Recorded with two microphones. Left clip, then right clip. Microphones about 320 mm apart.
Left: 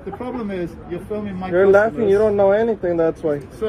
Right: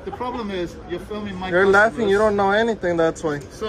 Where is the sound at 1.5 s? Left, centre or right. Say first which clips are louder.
Left 1 dB; centre.